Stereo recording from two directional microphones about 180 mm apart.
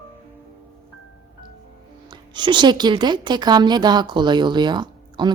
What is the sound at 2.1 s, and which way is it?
A woman's voice, 25° right (ahead or behind).